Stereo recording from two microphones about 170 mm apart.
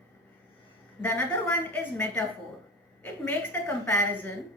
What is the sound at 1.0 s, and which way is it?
A woman's voice, 10° left (ahead or behind).